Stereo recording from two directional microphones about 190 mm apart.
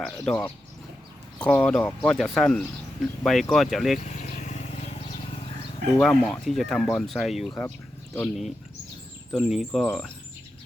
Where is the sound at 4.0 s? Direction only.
40° left (ahead or behind).